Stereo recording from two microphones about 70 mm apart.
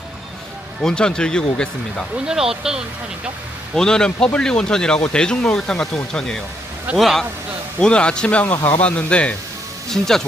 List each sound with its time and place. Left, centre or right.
0.8 s speech: centre
2.2 s speech: centre
3.8 s a man's voice: centre
7.8 s speech: centre
9.9 s a man's voice: centre